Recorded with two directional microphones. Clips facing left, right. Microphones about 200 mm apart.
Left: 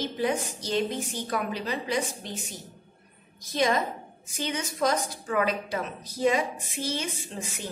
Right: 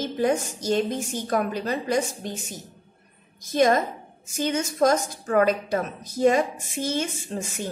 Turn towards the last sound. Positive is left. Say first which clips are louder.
# right 6 dB
turn(degrees=-45)  # may be behind; listen again after turning